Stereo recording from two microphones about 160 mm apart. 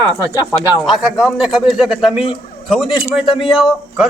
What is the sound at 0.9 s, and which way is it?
A man's voice, centre (ahead or behind).